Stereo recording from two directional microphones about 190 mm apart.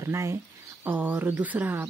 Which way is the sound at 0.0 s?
15° right (ahead or behind).